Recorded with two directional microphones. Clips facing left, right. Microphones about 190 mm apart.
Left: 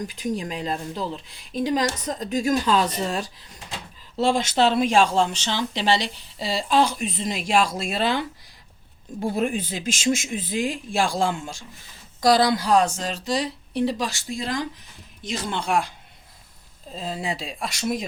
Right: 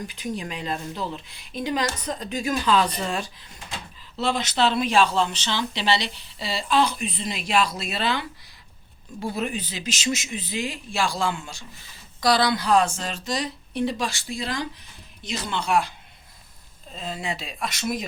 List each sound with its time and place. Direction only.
0.0 s a woman's voice: 40° left (ahead or behind)
16.9 s a woman's voice: 30° left (ahead or behind)